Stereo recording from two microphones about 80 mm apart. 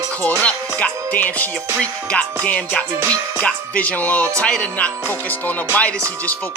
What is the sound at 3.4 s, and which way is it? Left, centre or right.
Music, centre.